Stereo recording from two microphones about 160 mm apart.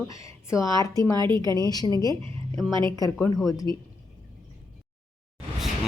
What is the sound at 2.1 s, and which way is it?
Speech, 30° right (ahead or behind).